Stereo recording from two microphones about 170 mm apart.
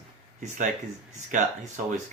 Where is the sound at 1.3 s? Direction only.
50° right (ahead or behind).